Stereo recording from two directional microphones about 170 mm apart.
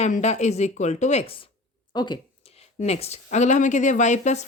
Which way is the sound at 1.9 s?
25° left (ahead or behind).